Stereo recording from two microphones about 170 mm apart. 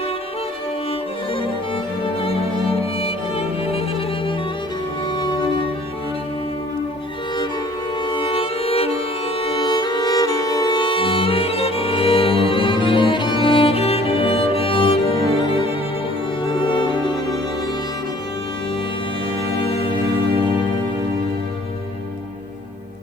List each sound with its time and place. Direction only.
2.2 s music: 35° left (ahead or behind)
8.1 s music: 30° left (ahead or behind)